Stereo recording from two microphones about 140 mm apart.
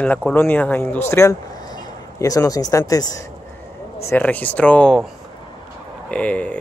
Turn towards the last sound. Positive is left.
turn(degrees=10)  # may be behind; listen again after turning